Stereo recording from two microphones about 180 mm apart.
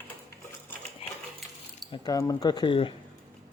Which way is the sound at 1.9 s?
20° left (ahead or behind).